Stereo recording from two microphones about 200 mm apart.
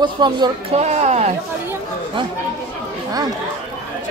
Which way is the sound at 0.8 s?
35° right (ahead or behind).